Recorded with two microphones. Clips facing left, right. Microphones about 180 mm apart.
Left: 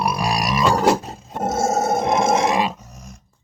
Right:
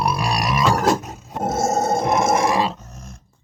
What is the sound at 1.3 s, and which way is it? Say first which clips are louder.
Roar: even; 10° left (ahead or behind).